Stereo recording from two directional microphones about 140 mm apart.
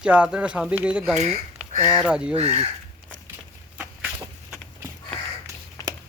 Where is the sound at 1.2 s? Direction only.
55° right (ahead or behind).